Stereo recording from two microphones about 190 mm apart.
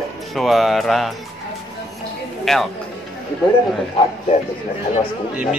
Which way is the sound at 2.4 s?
Centre (ahead or behind).